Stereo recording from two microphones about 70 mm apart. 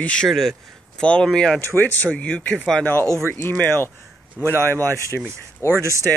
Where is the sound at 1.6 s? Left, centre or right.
Left.